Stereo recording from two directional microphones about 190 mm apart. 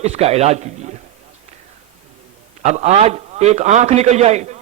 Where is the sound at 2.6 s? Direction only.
35° right (ahead or behind).